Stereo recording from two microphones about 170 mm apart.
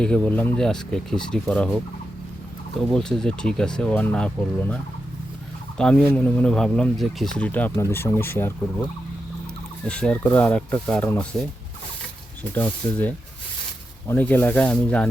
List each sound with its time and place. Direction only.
0.0 s speech: 5° left (ahead or behind)
9.8 s speech: 5° left (ahead or behind)
12.5 s speech: 10° left (ahead or behind)